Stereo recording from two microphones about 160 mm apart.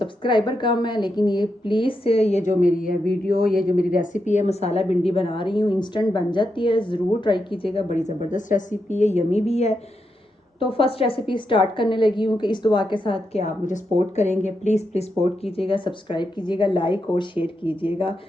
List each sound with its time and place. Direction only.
0.0 s a woman's voice: 30° left (ahead or behind)